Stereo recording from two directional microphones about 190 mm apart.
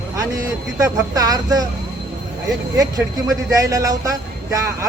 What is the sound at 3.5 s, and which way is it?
A man's voice, 15° right (ahead or behind).